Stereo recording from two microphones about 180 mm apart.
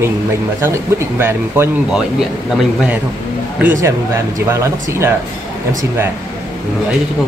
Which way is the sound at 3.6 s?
15° right (ahead or behind).